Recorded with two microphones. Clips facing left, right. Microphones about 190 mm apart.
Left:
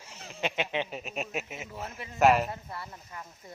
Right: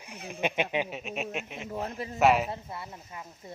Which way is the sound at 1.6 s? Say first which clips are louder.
Right 6 dB; 45° right (ahead or behind).